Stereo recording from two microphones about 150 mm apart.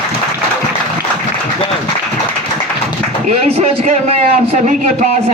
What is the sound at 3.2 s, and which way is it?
A man's voice, 45° right (ahead or behind).